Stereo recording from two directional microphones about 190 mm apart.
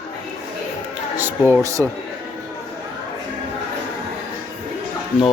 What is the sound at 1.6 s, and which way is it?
Speech, 15° right (ahead or behind).